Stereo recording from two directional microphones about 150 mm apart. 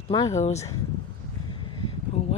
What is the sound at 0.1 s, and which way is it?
Speech, 30° left (ahead or behind).